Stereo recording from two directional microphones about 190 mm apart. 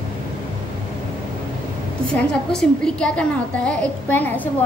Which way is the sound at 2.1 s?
5° left (ahead or behind).